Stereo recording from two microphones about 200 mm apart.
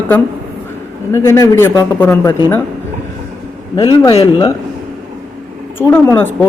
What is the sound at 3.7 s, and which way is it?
Speech, 15° left (ahead or behind).